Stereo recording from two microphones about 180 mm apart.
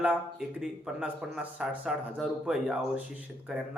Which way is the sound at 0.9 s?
5° right (ahead or behind).